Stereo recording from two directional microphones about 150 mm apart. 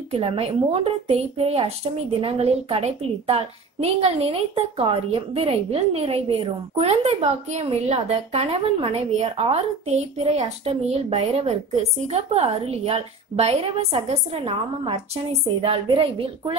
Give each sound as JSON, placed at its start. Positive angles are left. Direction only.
{"t": 0.1, "sound": "a woman's voice", "side_deg": -40}